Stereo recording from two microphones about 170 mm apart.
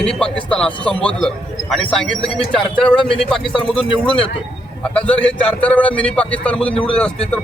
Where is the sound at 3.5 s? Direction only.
30° left (ahead or behind).